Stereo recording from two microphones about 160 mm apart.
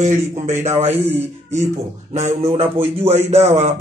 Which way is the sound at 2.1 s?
40° right (ahead or behind).